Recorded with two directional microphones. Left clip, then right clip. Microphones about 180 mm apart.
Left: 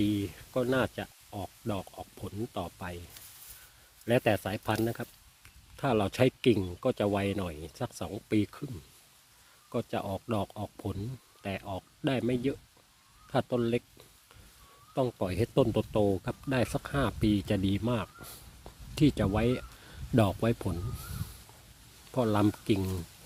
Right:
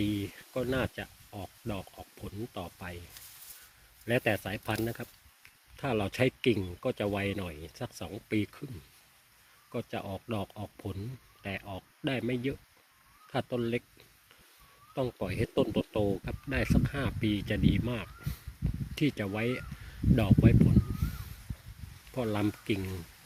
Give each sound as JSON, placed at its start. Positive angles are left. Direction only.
{"t": 0.0, "sound": "speech", "side_deg": 20}
{"t": 4.0, "sound": "speech", "side_deg": 15}
{"t": 9.7, "sound": "speech", "side_deg": 20}
{"t": 14.9, "sound": "speech", "side_deg": 20}
{"t": 22.1, "sound": "speech", "side_deg": 15}